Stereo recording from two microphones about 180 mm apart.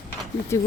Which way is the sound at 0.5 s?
15° left (ahead or behind).